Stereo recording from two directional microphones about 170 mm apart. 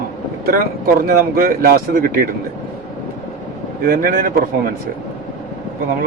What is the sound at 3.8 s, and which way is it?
Speech, 60° right (ahead or behind).